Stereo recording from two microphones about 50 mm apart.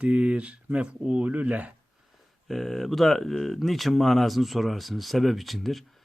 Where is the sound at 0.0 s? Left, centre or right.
Right.